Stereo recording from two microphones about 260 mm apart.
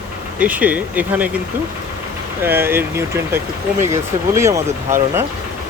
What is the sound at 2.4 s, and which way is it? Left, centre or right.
Speech, centre.